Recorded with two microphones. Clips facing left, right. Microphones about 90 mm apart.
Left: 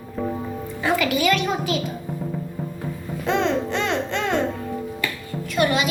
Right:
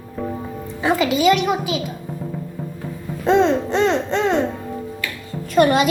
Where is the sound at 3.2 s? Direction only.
35° right (ahead or behind).